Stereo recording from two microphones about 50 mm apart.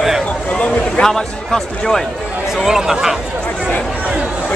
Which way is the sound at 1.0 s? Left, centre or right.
Centre.